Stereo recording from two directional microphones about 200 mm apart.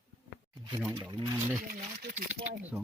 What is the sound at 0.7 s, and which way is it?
Speech, 15° right (ahead or behind).